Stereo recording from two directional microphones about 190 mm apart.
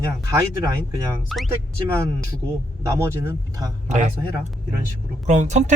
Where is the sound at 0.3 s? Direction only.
15° right (ahead or behind).